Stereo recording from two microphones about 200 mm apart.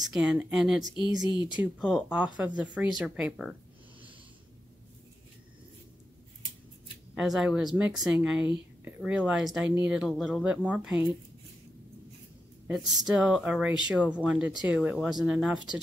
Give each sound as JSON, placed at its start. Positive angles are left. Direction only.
{"t": 0.0, "sound": "speech", "side_deg": 0}
{"t": 1.3, "sound": "speech", "side_deg": 25}
{"t": 1.6, "sound": "speech", "side_deg": -5}
{"t": 7.2, "sound": "speech", "side_deg": 0}
{"t": 12.6, "sound": "speech", "side_deg": -5}